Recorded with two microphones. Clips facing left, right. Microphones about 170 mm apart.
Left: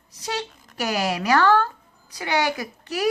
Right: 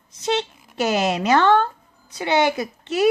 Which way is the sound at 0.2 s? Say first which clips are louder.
Right 7 dB; 25° right (ahead or behind).